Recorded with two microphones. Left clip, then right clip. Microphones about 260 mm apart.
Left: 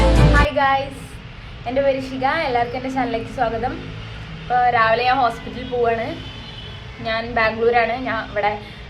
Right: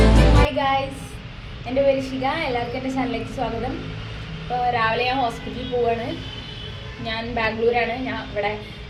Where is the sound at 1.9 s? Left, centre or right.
Left.